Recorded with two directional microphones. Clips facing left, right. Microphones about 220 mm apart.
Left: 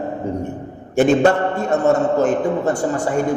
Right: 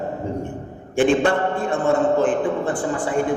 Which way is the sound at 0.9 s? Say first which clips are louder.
Left 3 dB; 40° left (ahead or behind).